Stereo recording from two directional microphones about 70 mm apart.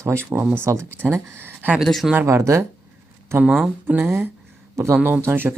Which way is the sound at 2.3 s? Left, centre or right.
Right.